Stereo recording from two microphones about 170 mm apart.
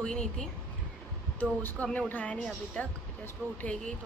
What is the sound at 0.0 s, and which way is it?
Speech, 5° left (ahead or behind).